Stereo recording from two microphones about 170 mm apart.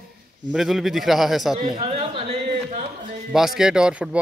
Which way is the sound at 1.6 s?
30° right (ahead or behind).